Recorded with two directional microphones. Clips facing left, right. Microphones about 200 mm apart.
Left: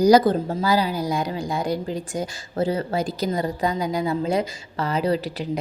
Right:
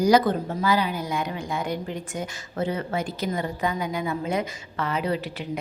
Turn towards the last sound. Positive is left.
turn(degrees=35)  # may be behind; listen again after turning